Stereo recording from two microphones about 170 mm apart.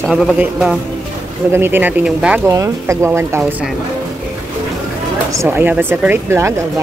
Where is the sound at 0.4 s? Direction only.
5° right (ahead or behind).